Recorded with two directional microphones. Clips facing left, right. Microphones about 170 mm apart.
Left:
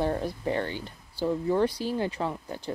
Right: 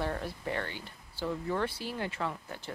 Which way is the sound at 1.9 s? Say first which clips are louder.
Left 6 dB; 30° left (ahead or behind).